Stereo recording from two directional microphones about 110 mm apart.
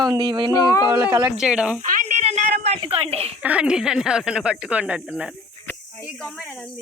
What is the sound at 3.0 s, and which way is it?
Speech, 65° right (ahead or behind).